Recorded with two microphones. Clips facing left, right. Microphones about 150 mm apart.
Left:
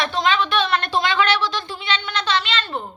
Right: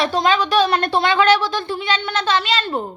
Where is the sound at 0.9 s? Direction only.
55° right (ahead or behind).